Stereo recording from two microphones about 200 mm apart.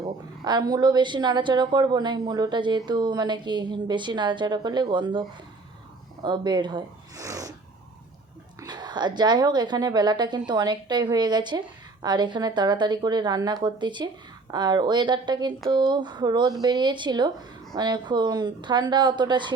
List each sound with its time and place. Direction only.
0.0 s a woman's voice: 20° right (ahead or behind)
6.2 s a woman's voice: 20° right (ahead or behind)
8.6 s a woman's voice: 20° right (ahead or behind)